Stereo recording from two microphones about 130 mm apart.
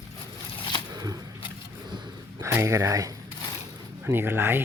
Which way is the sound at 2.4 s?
20° right (ahead or behind).